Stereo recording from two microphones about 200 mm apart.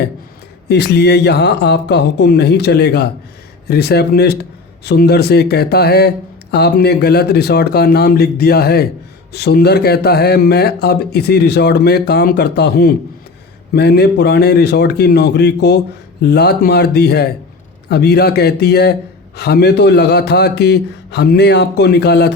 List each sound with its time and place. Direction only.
0.7 s speech: 55° left (ahead or behind)